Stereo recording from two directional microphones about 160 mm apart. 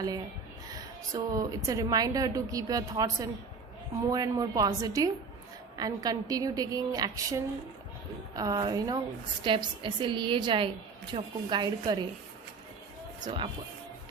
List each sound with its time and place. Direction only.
0.7 s a woman's voice: 20° right (ahead or behind)
13.1 s speech: 30° right (ahead or behind)